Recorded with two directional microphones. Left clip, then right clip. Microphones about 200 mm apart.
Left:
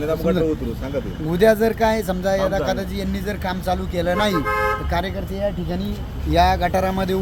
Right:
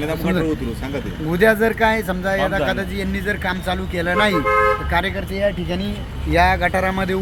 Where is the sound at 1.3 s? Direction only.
15° left (ahead or behind).